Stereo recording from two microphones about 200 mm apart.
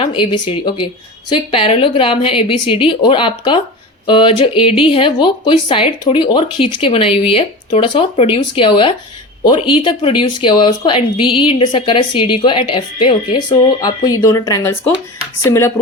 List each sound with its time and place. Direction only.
0.0 s speech: 25° left (ahead or behind)